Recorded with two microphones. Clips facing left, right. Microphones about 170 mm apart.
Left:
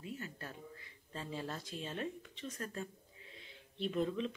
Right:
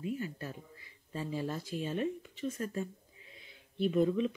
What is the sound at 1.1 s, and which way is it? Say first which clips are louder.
Speech: right 6 dB; 10° right (ahead or behind).